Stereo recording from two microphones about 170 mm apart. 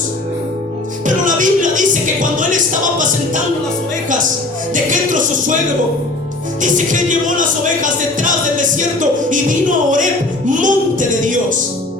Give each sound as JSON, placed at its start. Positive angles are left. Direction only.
{"t": 1.0, "sound": "music", "side_deg": -50}
{"t": 4.7, "sound": "music", "side_deg": -50}
{"t": 6.6, "sound": "music", "side_deg": -50}